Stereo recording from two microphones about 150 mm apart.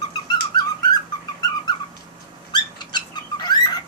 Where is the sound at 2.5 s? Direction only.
30° left (ahead or behind).